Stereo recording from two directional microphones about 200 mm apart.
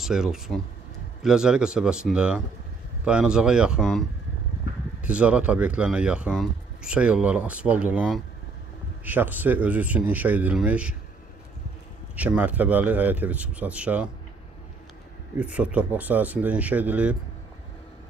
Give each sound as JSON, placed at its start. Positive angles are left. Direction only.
{"t": 0.0, "sound": "speech", "side_deg": -5}
{"t": 5.0, "sound": "speech", "side_deg": -5}
{"t": 12.2, "sound": "speech", "side_deg": -5}
{"t": 15.3, "sound": "speech", "side_deg": -5}